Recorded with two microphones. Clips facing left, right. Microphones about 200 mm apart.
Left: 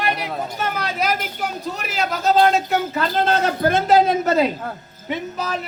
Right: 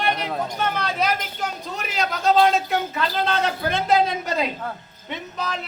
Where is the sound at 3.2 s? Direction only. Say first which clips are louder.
Left 5 dB; 40° left (ahead or behind).